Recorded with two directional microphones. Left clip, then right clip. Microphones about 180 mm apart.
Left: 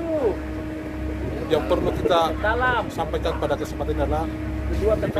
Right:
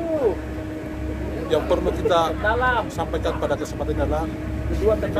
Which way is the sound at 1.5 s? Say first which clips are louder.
Right 1 dB; 10° left (ahead or behind).